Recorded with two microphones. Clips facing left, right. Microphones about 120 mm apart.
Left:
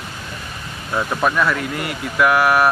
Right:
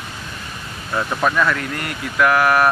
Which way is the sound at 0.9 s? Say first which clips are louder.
Even; 5° left (ahead or behind).